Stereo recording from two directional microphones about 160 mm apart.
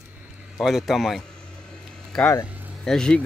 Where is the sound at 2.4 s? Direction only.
10° right (ahead or behind).